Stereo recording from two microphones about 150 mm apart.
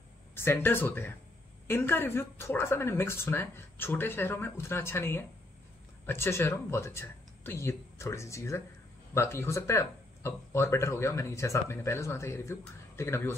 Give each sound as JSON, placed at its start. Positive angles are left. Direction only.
{"t": 0.3, "sound": "speech", "side_deg": 15}